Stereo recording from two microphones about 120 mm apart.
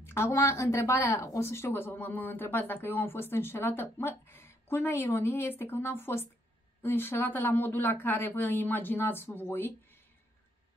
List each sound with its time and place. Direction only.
0.0 s speech: 20° left (ahead or behind)